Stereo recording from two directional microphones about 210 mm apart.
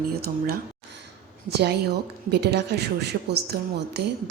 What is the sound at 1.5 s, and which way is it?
A woman's voice, 50° right (ahead or behind).